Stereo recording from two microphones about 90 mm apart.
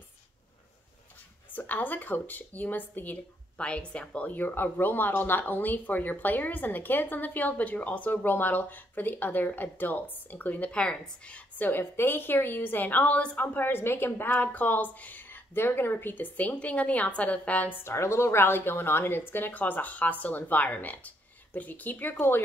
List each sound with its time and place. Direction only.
1.5 s speech: 20° left (ahead or behind)